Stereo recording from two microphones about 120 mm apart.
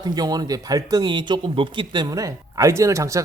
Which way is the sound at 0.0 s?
35° right (ahead or behind).